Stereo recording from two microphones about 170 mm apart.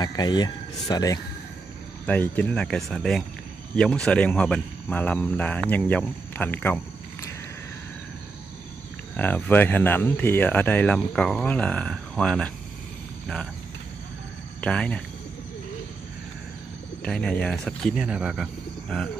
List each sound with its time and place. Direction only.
0.0 s speech: 25° left (ahead or behind)
2.0 s speech: 10° left (ahead or behind)
9.1 s speech: 10° left (ahead or behind)
14.6 s speech: 5° left (ahead or behind)
17.0 s speech: 5° left (ahead or behind)